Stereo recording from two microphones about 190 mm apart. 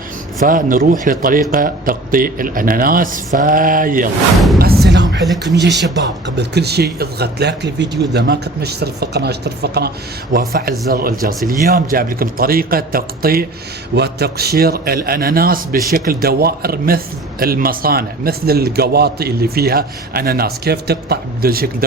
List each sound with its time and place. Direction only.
0.4 s a man's voice: 45° right (ahead or behind)
4.6 s music: 60° right (ahead or behind)
5.5 s a man's voice: 65° right (ahead or behind)